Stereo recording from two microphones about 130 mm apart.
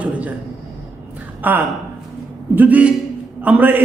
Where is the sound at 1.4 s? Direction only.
15° right (ahead or behind).